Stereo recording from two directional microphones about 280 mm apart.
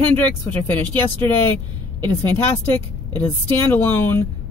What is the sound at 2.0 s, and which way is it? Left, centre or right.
Speech, centre.